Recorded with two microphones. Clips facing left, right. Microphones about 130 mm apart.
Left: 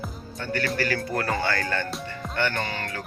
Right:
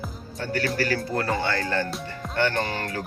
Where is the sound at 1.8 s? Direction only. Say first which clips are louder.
Even; centre (ahead or behind).